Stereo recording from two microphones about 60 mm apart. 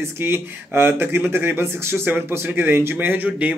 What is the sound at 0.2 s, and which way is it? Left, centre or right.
A man's voice, right.